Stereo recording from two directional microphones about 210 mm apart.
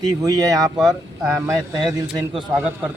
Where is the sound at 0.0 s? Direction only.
15° right (ahead or behind).